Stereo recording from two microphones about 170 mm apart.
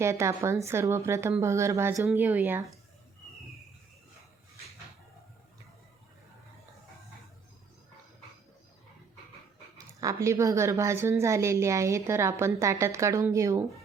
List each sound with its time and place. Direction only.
0.0 s a woman's voice: 15° right (ahead or behind)
9.7 s a woman's voice: 20° right (ahead or behind)